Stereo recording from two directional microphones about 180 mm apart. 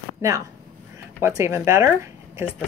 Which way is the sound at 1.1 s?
15° right (ahead or behind).